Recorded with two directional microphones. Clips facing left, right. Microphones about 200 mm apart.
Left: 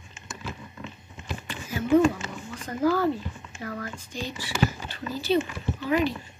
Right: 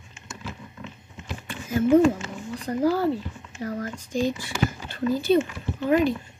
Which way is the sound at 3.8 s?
50° right (ahead or behind).